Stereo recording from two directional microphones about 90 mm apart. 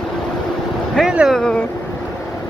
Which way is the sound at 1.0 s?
5° right (ahead or behind).